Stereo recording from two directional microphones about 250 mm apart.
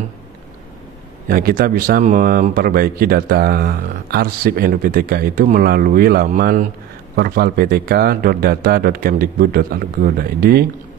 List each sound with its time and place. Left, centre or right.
1.3 s speech: right